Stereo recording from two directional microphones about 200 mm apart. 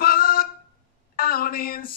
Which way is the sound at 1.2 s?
45° left (ahead or behind).